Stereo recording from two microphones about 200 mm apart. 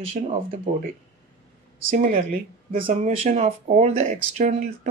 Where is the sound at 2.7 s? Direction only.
30° right (ahead or behind).